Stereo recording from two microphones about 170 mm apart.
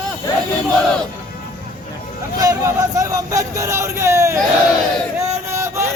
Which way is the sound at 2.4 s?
20° right (ahead or behind).